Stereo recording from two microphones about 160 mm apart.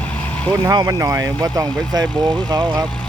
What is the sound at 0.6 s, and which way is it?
Speech, 20° right (ahead or behind).